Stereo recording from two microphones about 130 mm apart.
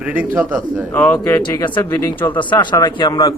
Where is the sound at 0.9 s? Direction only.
15° left (ahead or behind).